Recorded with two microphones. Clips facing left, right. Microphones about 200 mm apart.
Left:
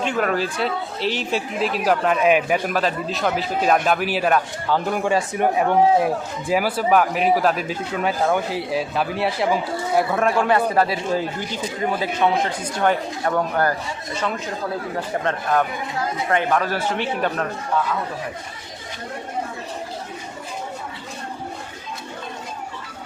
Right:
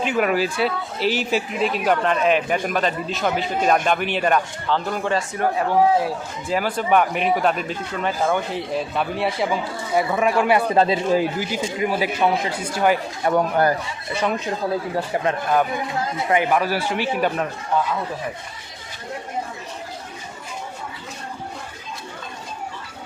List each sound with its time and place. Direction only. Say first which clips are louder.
0.0 s speech: right 1 dB; 5° right (ahead or behind)
10.8 s speech: right 3 dB; 20° right (ahead or behind)
15.2 s speech: even; 10° right (ahead or behind)